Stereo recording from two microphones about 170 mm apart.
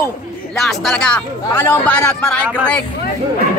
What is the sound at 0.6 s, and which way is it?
Speech, centre (ahead or behind).